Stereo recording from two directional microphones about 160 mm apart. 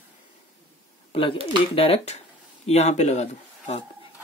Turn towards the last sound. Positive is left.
turn(degrees=45)  # may be behind; listen again after turning